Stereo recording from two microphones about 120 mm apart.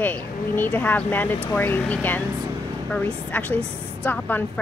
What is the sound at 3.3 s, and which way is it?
A woman's voice, 10° left (ahead or behind).